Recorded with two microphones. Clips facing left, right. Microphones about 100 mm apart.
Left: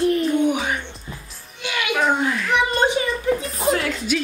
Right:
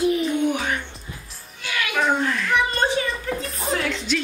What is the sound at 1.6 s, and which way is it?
Music, 20° left (ahead or behind).